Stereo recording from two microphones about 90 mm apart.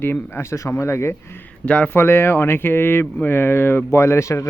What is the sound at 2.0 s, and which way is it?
Speech, 25° left (ahead or behind).